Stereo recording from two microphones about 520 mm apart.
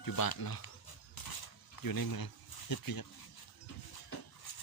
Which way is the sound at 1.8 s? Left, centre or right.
Left.